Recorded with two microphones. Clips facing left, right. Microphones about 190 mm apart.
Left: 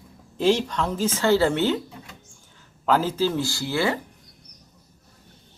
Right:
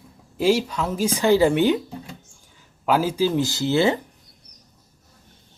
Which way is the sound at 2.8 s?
10° right (ahead or behind).